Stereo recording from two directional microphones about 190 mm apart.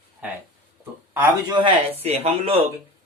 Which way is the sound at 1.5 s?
30° right (ahead or behind).